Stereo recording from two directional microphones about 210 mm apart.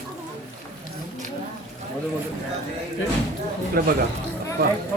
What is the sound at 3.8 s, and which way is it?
Speech, 45° right (ahead or behind).